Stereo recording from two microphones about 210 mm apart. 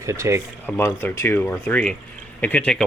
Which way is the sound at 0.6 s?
10° left (ahead or behind).